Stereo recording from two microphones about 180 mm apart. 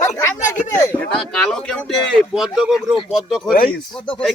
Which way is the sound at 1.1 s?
5° left (ahead or behind).